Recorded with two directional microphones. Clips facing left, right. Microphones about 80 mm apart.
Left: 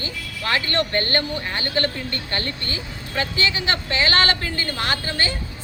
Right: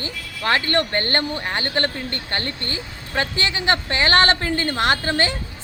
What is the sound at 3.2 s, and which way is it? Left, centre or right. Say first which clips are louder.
A woman's voice: even; right.